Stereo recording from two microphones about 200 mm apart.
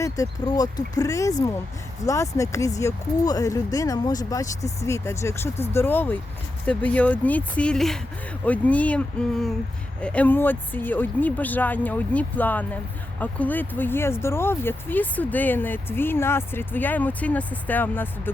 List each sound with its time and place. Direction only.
0.0 s speech: 15° left (ahead or behind)